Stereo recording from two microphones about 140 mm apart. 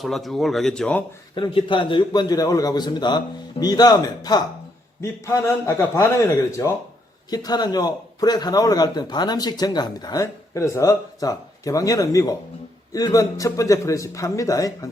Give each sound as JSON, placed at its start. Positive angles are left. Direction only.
{"t": 0.0, "sound": "speech", "side_deg": 0}
{"t": 1.4, "sound": "a man's voice", "side_deg": 35}